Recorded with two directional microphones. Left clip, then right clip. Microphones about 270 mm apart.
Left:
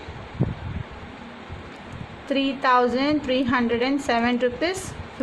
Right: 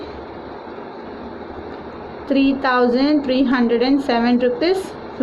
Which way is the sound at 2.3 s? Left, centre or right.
Centre.